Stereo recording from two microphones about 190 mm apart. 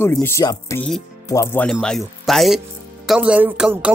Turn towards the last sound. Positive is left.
turn(degrees=-5)  # may be behind; listen again after turning